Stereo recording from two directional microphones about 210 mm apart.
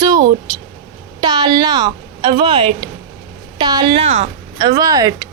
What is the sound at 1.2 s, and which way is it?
A woman's voice, 20° right (ahead or behind).